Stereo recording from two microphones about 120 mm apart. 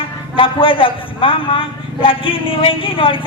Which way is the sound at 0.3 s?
45° left (ahead or behind).